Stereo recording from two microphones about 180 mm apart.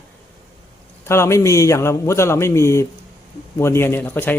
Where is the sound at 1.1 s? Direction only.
15° left (ahead or behind).